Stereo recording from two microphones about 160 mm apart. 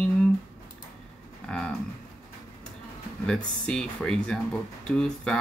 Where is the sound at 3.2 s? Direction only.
5° left (ahead or behind).